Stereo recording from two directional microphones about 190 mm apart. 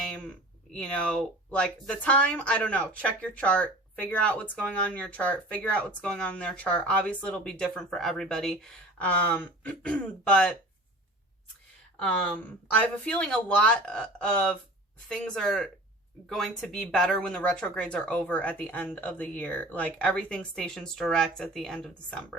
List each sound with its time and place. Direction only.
0.1 s speech: 5° left (ahead or behind)
11.9 s speech: 5° left (ahead or behind)